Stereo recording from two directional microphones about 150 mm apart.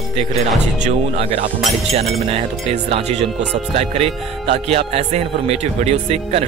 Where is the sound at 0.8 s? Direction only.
40° right (ahead or behind).